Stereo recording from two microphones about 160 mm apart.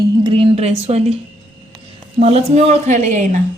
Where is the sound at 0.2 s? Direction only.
30° right (ahead or behind); by 3.4 s 50° right (ahead or behind).